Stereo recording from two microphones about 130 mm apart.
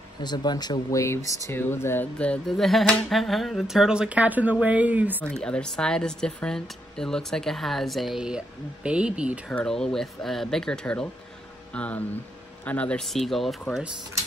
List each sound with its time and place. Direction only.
0.2 s speech: 35° left (ahead or behind); by 5.2 s 15° right (ahead or behind)
5.2 s speech: 5° left (ahead or behind); by 9.5 s 10° right (ahead or behind)
9.5 s speech: 5° left (ahead or behind)